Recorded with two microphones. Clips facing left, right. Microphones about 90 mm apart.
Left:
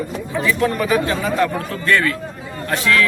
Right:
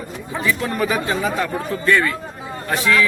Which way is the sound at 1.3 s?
10° right (ahead or behind).